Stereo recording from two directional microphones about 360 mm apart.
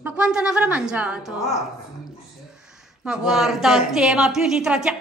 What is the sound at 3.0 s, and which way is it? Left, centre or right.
A woman's voice, centre.